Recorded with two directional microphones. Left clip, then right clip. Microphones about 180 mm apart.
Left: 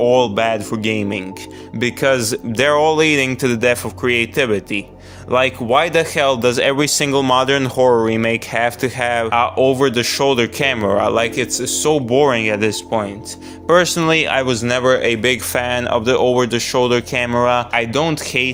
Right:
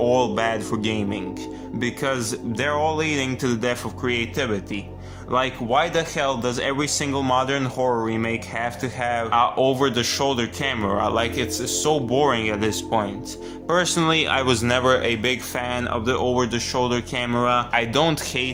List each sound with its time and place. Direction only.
0.0 s speech: 35° left (ahead or behind)
1.8 s speech: 50° left (ahead or behind)
9.3 s speech: 35° left (ahead or behind)
14.4 s speech: 15° left (ahead or behind)
14.7 s speech: 30° left (ahead or behind)